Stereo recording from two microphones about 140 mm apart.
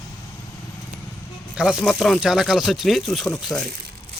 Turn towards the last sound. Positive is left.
turn(degrees=0)  # may be behind; listen again after turning